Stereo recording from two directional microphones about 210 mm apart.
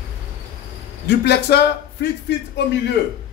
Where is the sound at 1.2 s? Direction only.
50° left (ahead or behind).